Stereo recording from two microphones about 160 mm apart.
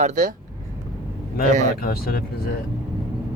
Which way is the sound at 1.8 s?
70° left (ahead or behind).